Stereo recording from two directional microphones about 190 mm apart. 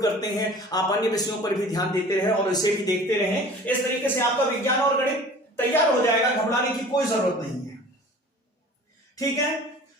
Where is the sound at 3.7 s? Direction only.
10° left (ahead or behind).